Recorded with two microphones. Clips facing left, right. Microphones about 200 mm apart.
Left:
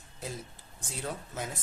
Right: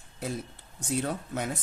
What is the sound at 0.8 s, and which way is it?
Speech, 65° right (ahead or behind).